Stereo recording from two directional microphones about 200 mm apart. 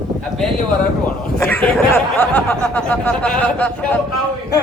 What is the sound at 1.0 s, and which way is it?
Speech, 10° left (ahead or behind).